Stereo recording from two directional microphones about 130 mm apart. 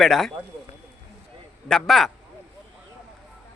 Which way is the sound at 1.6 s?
5° left (ahead or behind).